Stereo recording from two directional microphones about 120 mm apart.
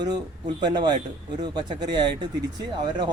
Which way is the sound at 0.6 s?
40° right (ahead or behind).